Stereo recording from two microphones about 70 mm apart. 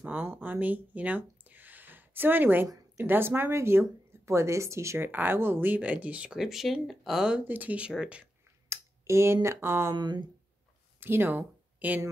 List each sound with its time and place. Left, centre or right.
0.0 s speech: right
6.3 s speech: centre
7.3 s speech: right
8.6 s speech: right
9.9 s speech: right
11.0 s speech: right